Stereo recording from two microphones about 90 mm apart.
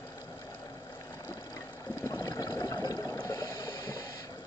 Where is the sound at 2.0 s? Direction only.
35° left (ahead or behind).